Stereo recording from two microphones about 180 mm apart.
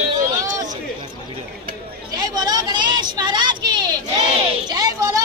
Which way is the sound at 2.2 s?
20° right (ahead or behind).